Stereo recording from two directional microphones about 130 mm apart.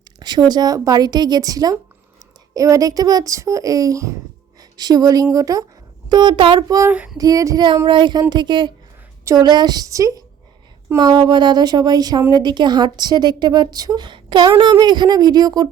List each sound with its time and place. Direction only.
0.2 s a woman's voice: 30° right (ahead or behind)
6.8 s female singing: 15° right (ahead or behind)
7.2 s a child's voice: 30° right (ahead or behind)